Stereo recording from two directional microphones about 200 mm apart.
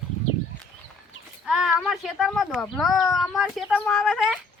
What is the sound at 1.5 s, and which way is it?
Speech, 5° right (ahead or behind).